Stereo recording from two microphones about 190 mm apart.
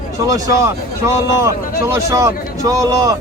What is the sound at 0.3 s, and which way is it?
Speech, 15° right (ahead or behind).